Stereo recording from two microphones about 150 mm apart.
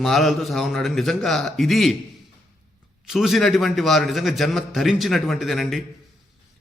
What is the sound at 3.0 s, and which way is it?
A man's voice, centre (ahead or behind).